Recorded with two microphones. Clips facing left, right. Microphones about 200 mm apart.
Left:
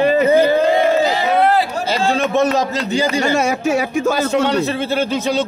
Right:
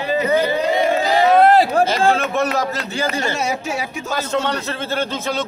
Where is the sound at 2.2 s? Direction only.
20° left (ahead or behind).